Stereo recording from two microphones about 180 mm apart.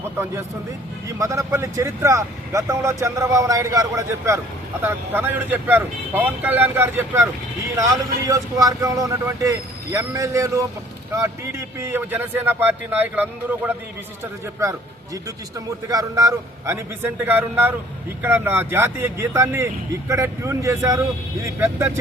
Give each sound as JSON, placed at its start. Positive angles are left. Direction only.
{"t": 1.2, "sound": "speech", "side_deg": -15}